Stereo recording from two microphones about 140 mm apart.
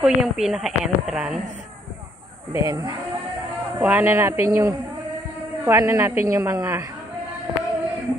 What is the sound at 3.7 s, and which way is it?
Speech, 15° right (ahead or behind).